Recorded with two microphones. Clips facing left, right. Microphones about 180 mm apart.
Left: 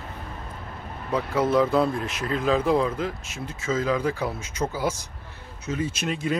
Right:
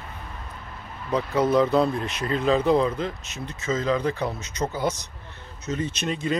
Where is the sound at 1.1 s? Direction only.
5° left (ahead or behind).